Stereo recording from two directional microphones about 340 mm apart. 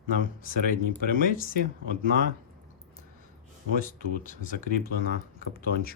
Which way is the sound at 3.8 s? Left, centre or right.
Left.